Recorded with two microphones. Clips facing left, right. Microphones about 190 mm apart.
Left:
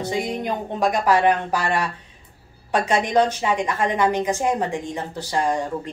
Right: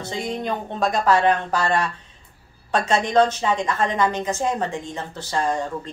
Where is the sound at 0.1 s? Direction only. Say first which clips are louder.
Right 1 dB; 15° left (ahead or behind).